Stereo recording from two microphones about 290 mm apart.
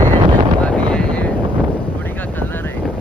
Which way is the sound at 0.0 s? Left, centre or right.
Right.